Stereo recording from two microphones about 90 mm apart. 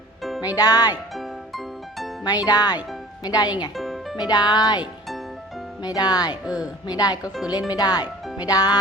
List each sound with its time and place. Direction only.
0.2 s music: centre (ahead or behind)
0.5 s speech: 45° left (ahead or behind)
1.1 s music: centre (ahead or behind)
2.2 s speech: 45° left (ahead or behind)
3.8 s music: centre (ahead or behind)
4.2 s speech: 50° left (ahead or behind)
5.8 s speech: 45° left (ahead or behind)
6.4 s speech: 10° right (ahead or behind)
6.8 s speech: 50° left (ahead or behind)